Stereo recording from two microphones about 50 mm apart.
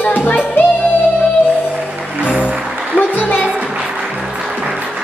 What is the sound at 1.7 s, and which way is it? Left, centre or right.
Music, centre.